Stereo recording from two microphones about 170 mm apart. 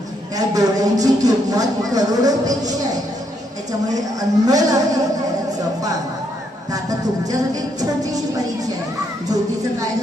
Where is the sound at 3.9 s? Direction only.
20° right (ahead or behind).